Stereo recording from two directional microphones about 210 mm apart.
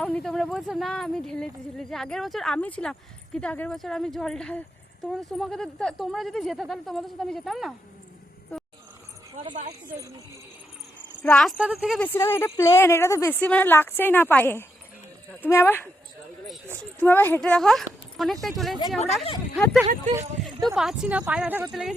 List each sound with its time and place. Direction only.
0.0 s speech: 5° left (ahead or behind)
9.3 s a sound: 25° right (ahead or behind)
11.2 s speech: 5° left (ahead or behind)
12.0 s a woman's voice: 10° left (ahead or behind)
17.0 s speech: 10° left (ahead or behind)